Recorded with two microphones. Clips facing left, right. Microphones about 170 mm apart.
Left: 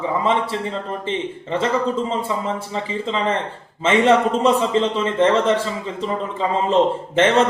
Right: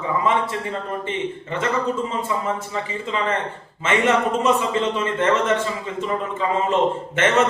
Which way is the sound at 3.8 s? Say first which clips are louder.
Left 4 dB; 30° left (ahead or behind).